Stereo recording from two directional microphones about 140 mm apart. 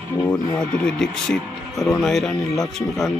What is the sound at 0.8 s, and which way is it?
Speech, 5° left (ahead or behind).